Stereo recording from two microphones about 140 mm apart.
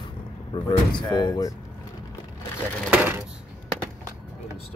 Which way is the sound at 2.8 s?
15° right (ahead or behind).